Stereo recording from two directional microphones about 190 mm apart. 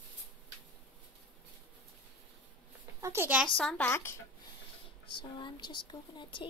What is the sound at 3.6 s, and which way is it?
Speech, 5° left (ahead or behind).